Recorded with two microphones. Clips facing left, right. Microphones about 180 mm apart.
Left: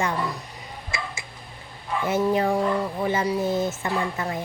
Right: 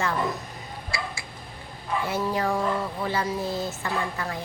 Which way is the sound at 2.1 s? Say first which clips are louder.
Left 6 dB; 20° left (ahead or behind).